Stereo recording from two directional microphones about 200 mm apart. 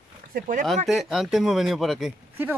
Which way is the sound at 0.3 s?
40° right (ahead or behind).